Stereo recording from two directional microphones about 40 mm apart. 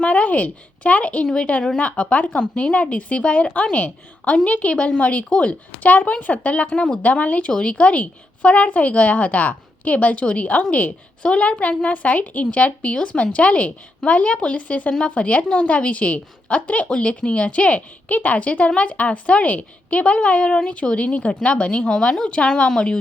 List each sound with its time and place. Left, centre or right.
0.0 s a woman's voice: left
2.3 s a woman's voice: left
6.7 s a woman's voice: left
7.0 s a woman's voice: left
7.5 s a woman's voice: left
11.9 s a woman's voice: left